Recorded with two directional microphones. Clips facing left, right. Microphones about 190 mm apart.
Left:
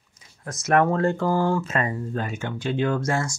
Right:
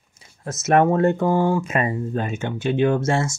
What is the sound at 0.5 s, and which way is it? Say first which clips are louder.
Speech: right 3 dB; 25° right (ahead or behind).